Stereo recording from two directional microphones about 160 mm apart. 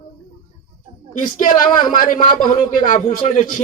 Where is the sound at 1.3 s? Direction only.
60° left (ahead or behind).